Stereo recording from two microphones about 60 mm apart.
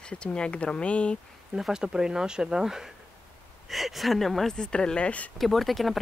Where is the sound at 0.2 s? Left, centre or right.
Centre.